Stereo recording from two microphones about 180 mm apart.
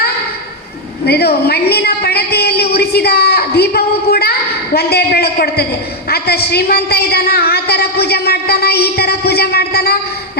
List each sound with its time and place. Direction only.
1.0 s a woman's voice: 60° left (ahead or behind)